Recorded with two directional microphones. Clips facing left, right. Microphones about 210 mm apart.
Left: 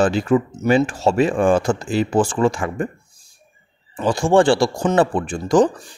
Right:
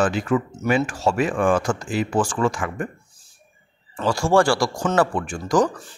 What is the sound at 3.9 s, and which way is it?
Speech, 15° left (ahead or behind).